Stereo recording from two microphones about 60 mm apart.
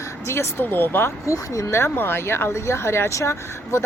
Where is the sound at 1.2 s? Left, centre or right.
Left.